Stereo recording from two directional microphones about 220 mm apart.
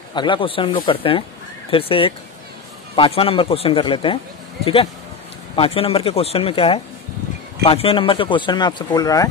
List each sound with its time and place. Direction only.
0.1 s speech: 20° left (ahead or behind)
5.6 s speech: 25° left (ahead or behind)